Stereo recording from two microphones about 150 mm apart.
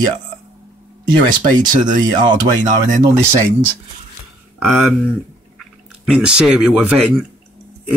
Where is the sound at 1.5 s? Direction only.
30° right (ahead or behind).